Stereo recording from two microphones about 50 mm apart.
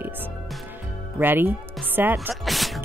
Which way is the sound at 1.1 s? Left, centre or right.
Right.